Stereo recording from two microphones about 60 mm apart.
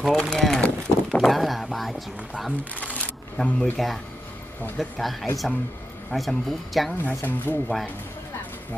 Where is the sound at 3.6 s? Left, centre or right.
Centre.